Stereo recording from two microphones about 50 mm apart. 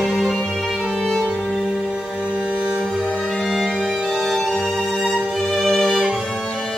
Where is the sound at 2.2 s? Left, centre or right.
Right.